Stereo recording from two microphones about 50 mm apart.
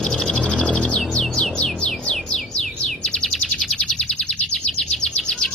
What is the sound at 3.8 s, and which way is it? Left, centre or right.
Bird, centre.